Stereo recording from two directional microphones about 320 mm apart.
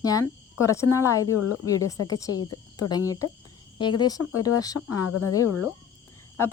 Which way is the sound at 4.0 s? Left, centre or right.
Centre.